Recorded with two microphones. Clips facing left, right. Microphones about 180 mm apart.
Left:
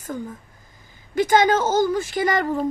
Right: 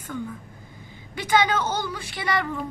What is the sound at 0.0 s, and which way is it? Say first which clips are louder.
A woman's voice: left 2 dB; 40° left (ahead or behind).